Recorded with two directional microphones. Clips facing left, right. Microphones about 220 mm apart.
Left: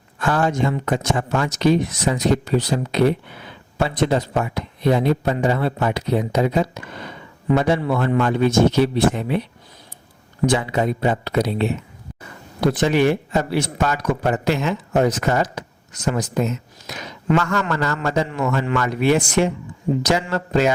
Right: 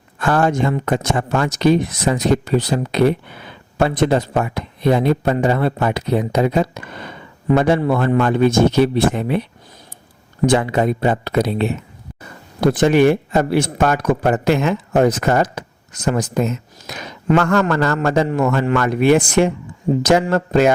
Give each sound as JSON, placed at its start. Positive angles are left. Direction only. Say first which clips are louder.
{"t": 0.2, "sound": "speech", "louder": "right 3 dB", "side_deg": -55}
{"t": 10.4, "sound": "speech", "louder": "right 4 dB", "side_deg": -55}